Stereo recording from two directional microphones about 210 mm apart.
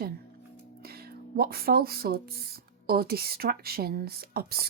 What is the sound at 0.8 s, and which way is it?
Speech, 45° right (ahead or behind).